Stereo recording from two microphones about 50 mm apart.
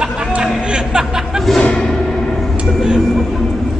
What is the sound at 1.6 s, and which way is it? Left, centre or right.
Music, left.